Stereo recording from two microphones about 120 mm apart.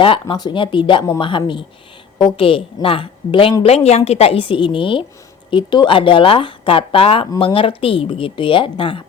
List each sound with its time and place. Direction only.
0.0 s speech: 45° left (ahead or behind)
3.6 s speech: 60° left (ahead or behind)